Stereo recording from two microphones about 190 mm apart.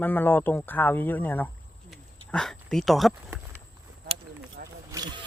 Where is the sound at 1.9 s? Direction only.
Centre (ahead or behind).